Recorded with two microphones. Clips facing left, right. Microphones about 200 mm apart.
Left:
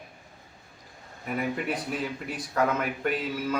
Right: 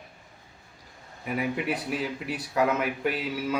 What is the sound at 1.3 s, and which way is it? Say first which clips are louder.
Speech: right 1 dB; 5° right (ahead or behind).